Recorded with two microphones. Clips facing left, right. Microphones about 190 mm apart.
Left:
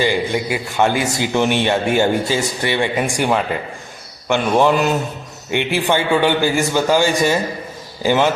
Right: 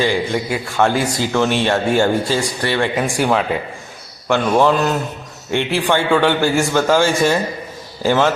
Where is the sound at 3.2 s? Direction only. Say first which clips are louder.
Right 2 dB; centre (ahead or behind).